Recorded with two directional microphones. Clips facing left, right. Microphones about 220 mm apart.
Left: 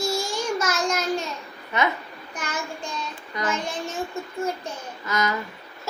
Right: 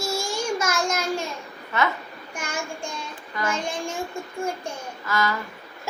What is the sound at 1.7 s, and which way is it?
Speech, 15° left (ahead or behind).